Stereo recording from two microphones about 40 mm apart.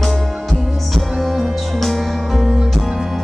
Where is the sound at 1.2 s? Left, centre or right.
Centre.